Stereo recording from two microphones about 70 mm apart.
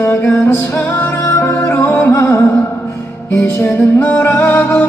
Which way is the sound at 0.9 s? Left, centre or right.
Left.